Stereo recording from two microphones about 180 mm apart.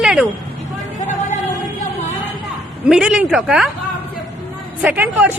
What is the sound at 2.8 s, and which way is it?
Speech, 5° right (ahead or behind).